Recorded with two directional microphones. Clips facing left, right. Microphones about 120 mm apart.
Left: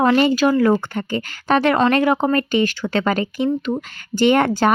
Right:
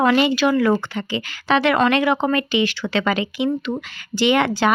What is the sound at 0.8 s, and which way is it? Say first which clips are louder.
A woman's voice: left 2 dB; 50° left (ahead or behind).